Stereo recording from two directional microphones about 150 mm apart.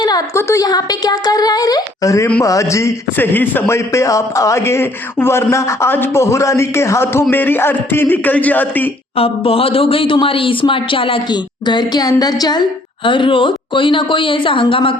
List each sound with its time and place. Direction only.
0.0 s a man's voice: 25° left (ahead or behind)
9.1 s speech: 40° left (ahead or behind)